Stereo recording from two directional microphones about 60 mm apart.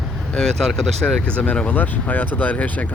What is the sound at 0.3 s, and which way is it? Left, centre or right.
Speech, centre.